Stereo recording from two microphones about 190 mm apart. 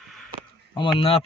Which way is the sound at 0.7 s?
25° left (ahead or behind).